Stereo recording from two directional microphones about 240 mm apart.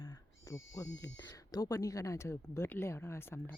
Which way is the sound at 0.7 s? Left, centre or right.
Centre.